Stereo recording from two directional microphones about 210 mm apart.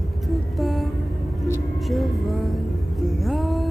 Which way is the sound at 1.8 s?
Centre (ahead or behind).